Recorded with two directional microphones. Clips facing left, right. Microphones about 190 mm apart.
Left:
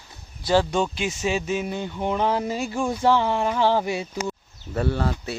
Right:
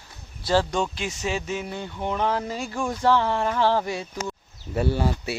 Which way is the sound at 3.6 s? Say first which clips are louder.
Left 1 dB; 5° left (ahead or behind).